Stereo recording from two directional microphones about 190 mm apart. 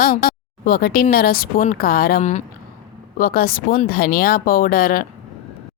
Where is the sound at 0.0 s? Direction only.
55° left (ahead or behind).